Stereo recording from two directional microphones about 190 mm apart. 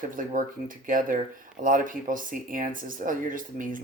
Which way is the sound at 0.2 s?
45° right (ahead or behind).